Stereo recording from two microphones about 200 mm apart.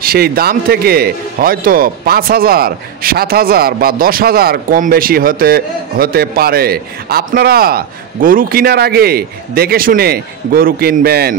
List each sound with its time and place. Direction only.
0.0 s a man's voice: 50° right (ahead or behind)